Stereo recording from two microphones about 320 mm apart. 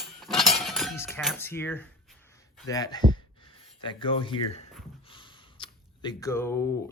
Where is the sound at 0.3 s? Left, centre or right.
Centre.